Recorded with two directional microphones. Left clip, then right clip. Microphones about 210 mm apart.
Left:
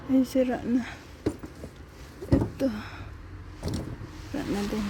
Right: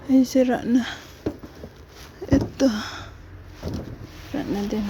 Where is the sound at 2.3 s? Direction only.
25° right (ahead or behind).